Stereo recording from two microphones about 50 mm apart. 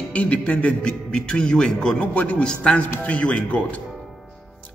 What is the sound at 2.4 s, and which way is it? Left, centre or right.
A man's voice, left.